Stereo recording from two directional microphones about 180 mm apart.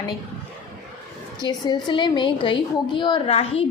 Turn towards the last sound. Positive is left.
turn(degrees=35)  # may be behind; listen again after turning